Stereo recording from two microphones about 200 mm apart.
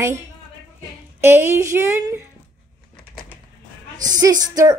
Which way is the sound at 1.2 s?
10° right (ahead or behind).